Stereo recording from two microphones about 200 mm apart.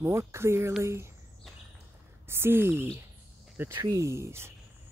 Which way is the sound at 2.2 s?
10° right (ahead or behind).